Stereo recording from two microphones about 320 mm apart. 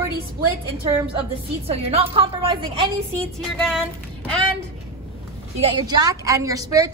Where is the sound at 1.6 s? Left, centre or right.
Centre.